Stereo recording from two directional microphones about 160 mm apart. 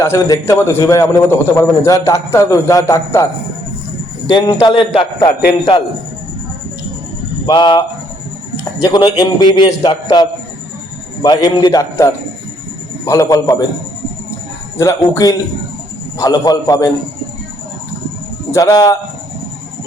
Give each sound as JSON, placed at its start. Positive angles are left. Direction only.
{"t": 0.0, "sound": "a man's voice", "side_deg": 15}
{"t": 4.3, "sound": "a man's voice", "side_deg": 35}
{"t": 7.4, "sound": "a man's voice", "side_deg": 30}
{"t": 14.8, "sound": "a man's voice", "side_deg": 20}
{"t": 18.5, "sound": "a man's voice", "side_deg": 20}